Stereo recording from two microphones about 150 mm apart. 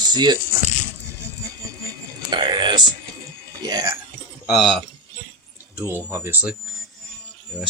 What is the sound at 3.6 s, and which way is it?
Speech, 25° right (ahead or behind).